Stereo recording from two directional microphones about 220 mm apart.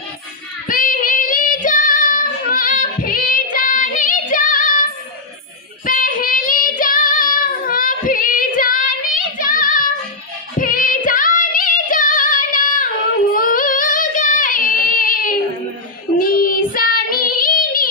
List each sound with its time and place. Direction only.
0.7 s child singing: 40° left (ahead or behind)
10.6 s female singing: 40° left (ahead or behind)
13.3 s child singing: 40° left (ahead or behind)